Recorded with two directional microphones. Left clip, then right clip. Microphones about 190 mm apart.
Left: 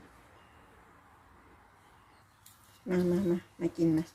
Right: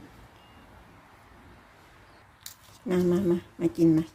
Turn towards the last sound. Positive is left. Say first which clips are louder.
# right 6 dB
turn(degrees=-10)  # may be behind; listen again after turning